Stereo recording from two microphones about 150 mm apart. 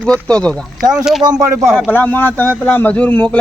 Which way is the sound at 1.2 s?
20° right (ahead or behind).